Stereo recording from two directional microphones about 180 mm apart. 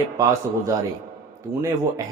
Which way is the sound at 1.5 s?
30° right (ahead or behind).